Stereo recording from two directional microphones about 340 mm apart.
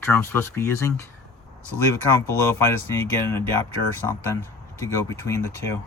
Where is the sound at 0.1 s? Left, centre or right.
Centre.